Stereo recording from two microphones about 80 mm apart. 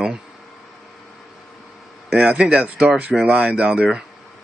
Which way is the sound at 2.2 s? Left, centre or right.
Centre.